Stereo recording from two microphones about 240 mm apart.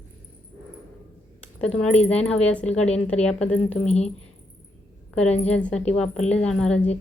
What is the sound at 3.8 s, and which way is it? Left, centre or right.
Speech, left.